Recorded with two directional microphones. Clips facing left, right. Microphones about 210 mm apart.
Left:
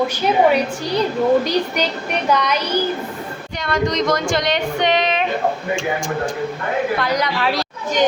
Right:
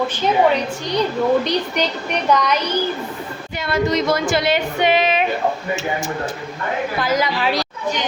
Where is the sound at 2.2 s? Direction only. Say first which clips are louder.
Right 1 dB; 5° left (ahead or behind).